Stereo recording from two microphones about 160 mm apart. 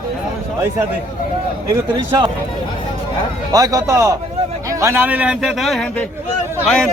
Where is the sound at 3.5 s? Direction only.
20° right (ahead or behind).